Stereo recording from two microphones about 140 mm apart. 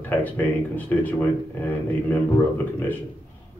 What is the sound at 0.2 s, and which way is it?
A man's voice, 10° left (ahead or behind).